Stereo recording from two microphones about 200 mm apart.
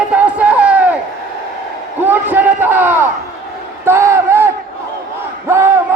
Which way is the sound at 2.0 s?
10° right (ahead or behind).